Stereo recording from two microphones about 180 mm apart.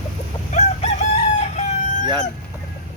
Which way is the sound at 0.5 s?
40° left (ahead or behind).